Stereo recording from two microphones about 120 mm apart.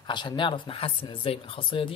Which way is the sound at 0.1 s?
40° left (ahead or behind).